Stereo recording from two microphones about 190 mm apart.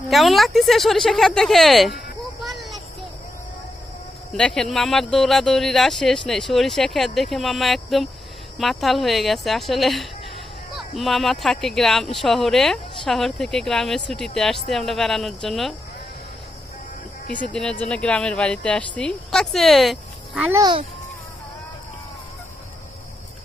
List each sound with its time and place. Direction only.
0.1 s speech: centre (ahead or behind)
2.4 s a sound: centre (ahead or behind)
4.3 s speech: 5° left (ahead or behind)
17.5 s speech: 5° left (ahead or behind)
20.5 s a child's voice: 20° right (ahead or behind)